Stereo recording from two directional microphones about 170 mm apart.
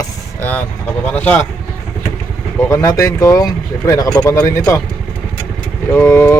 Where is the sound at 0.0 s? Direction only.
10° left (ahead or behind).